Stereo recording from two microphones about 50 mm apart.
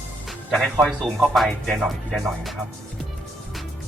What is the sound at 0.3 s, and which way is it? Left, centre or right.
Music, centre.